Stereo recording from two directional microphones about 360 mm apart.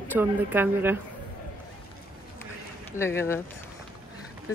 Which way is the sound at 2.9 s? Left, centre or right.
Centre.